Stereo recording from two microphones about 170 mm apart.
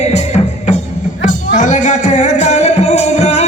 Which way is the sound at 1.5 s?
45° left (ahead or behind).